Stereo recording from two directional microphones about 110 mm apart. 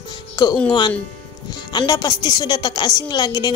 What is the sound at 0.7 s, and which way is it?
A woman's voice, 40° left (ahead or behind).